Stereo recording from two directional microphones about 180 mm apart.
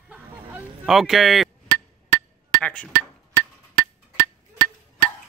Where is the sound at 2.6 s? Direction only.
5° left (ahead or behind).